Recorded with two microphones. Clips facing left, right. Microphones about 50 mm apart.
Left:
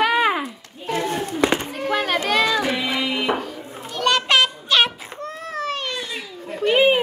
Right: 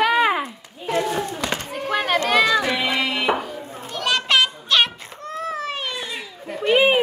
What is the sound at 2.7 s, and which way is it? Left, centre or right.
Music, right.